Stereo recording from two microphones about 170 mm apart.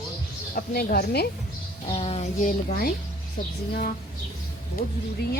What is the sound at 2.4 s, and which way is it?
A woman's voice, 55° left (ahead or behind).